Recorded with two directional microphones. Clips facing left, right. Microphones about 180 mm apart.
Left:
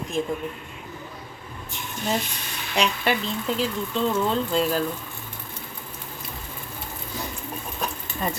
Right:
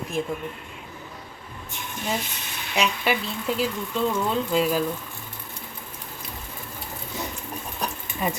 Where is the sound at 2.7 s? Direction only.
5° right (ahead or behind).